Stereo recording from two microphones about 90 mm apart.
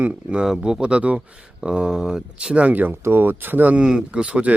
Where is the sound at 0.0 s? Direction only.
15° right (ahead or behind).